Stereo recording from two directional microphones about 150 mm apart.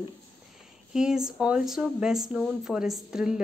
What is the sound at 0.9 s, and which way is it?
Speech, 5° right (ahead or behind).